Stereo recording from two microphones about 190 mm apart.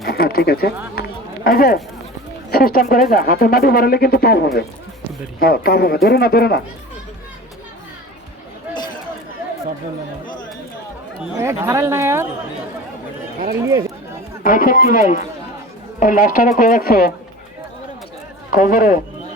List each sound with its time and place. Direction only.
0.0 s speech: 55° left (ahead or behind)
0.9 s run: 50° left (ahead or behind)
2.5 s speech: 50° left (ahead or behind)
11.3 s speech: 15° right (ahead or behind)
14.4 s speech: 45° left (ahead or behind)
18.5 s speech: 45° left (ahead or behind)